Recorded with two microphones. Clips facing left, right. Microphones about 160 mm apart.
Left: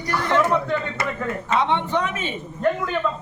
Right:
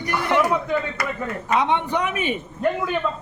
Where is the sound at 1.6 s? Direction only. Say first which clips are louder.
Even; 15° right (ahead or behind).